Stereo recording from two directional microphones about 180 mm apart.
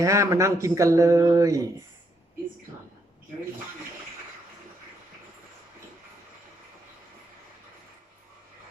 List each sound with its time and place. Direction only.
0.0 s speech: 15° right (ahead or behind)